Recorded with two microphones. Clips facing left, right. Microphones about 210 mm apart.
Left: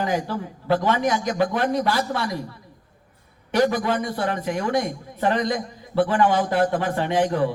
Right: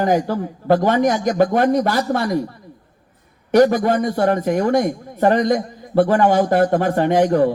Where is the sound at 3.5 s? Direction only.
45° right (ahead or behind).